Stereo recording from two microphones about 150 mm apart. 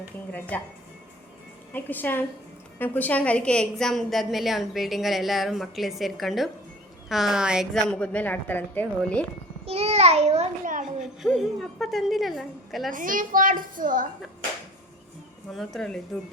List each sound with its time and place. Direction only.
0.3 s a woman's voice: 10° left (ahead or behind)
1.7 s a woman's voice: 10° left (ahead or behind)
9.6 s a child's voice: 45° right (ahead or behind)
11.0 s a woman's voice: 5° right (ahead or behind)
12.9 s a woman's voice: 65° right (ahead or behind)
15.5 s a woman's voice: 5° left (ahead or behind)